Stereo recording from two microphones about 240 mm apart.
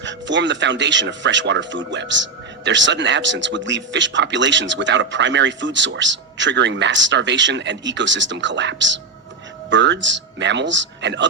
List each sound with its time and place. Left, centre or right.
0.0 s a man's voice: right